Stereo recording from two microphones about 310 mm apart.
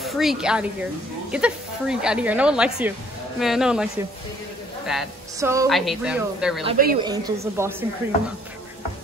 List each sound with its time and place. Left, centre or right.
0.0 s a woman's voice: centre
6.6 s a woman's voice: right